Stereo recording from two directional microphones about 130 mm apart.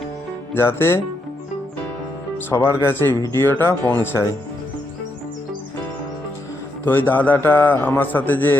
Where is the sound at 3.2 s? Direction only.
20° left (ahead or behind).